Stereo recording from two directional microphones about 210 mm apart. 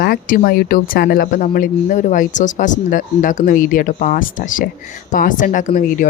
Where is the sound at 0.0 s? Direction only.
45° left (ahead or behind).